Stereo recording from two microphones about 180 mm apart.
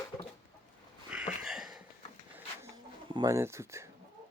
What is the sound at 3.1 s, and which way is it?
Speech, 20° right (ahead or behind).